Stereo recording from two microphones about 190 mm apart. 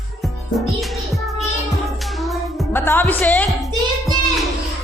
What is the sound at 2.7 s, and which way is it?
Music, 10° left (ahead or behind).